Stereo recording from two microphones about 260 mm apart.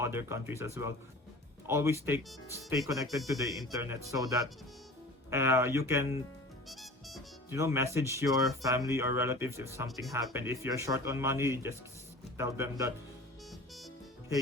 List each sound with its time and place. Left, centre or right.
0.0 s speech: centre
6.7 s music: centre
7.5 s speech: centre
13.5 s music: centre